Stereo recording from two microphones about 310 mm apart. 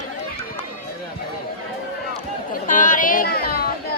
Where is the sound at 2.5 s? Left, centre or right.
Left.